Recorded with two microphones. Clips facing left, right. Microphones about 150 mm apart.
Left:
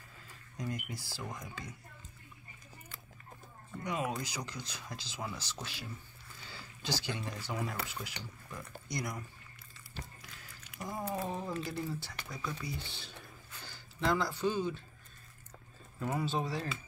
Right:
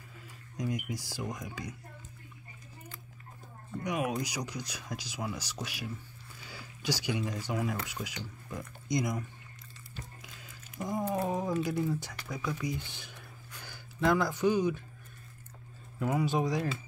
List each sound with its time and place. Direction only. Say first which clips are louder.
0.6 s speech: right 5 dB; 15° right (ahead or behind)
3.8 s speech: right 4 dB; 15° right (ahead or behind)
10.2 s a sound: right 3 dB; 20° right (ahead or behind)
11.2 s speech: right 7 dB; 15° right (ahead or behind)
16.0 s speech: right 5 dB; 10° right (ahead or behind)